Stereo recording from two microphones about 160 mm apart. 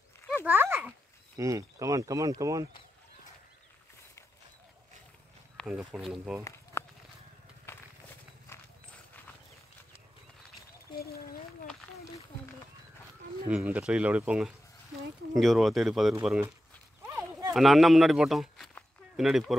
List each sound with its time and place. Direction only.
0.5 s a sound: 15° right (ahead or behind)
1.3 s speech: 20° right (ahead or behind)
5.6 s a sound: 5° left (ahead or behind)
5.9 s speech: 5° right (ahead or behind)
6.8 s walk: 15° left (ahead or behind)
7.7 s a sound: 15° left (ahead or behind)
8.5 s horse: 15° left (ahead or behind)
11.0 s a sound: 70° left (ahead or behind)
13.5 s speech: 10° right (ahead or behind)
16.2 s speech: 10° right (ahead or behind)
17.0 s clip-clop: 15° right (ahead or behind)
17.6 s speech: centre (ahead or behind)